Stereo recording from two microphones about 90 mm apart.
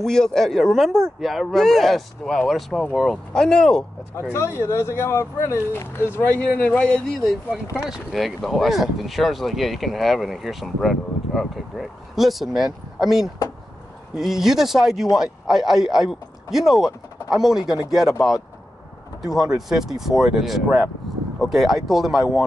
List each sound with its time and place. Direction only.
0.0 s speech: 5° left (ahead or behind)
4.6 s speech: 30° left (ahead or behind); by 7.3 s 10° left (ahead or behind)
7.8 s speech: 5° right (ahead or behind)
19.2 s speech: 5° right (ahead or behind)